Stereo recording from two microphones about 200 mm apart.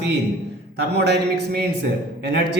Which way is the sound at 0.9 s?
55° right (ahead or behind).